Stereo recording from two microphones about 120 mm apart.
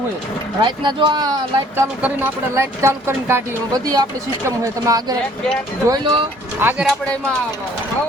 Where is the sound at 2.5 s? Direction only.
20° right (ahead or behind).